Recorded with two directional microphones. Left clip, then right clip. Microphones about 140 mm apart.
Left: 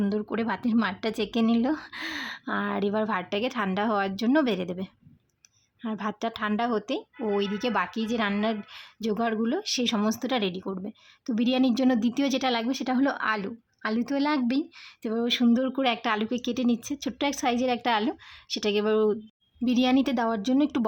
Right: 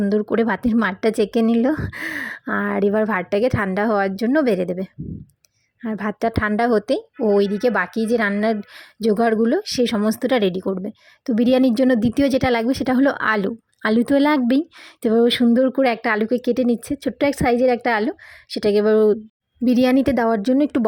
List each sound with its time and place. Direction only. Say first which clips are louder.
0.1 s a woman's voice: right 10 dB; 40° right (ahead or behind)
15.0 s a sound: right 11 dB; 50° right (ahead or behind)
15.4 s a woman's voice: right 8 dB; 35° right (ahead or behind)